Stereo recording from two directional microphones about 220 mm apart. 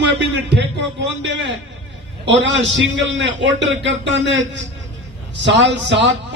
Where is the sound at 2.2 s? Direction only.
55° right (ahead or behind).